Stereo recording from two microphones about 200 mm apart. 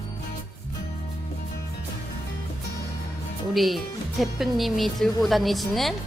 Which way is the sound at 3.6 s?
Centre (ahead or behind).